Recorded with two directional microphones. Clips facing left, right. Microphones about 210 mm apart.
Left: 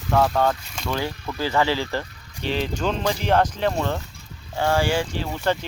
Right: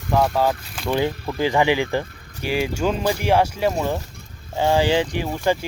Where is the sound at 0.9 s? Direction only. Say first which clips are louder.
Right 5 dB; 20° right (ahead or behind).